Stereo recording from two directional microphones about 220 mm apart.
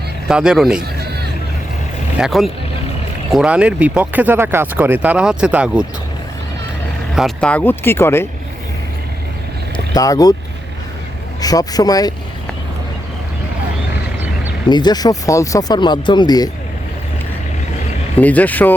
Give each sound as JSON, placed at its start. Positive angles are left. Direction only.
{"t": 0.3, "sound": "speech", "side_deg": -5}
{"t": 2.1, "sound": "speech", "side_deg": 0}
{"t": 7.2, "sound": "speech", "side_deg": 0}
{"t": 9.7, "sound": "speech", "side_deg": 15}
{"t": 11.3, "sound": "speech", "side_deg": 15}
{"t": 14.7, "sound": "speech", "side_deg": 20}
{"t": 18.2, "sound": "speech", "side_deg": 5}